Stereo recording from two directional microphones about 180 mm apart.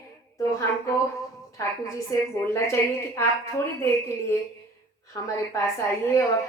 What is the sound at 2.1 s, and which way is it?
A woman's voice, 15° left (ahead or behind).